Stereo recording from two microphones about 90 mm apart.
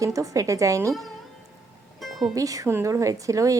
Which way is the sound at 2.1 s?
Centre (ahead or behind).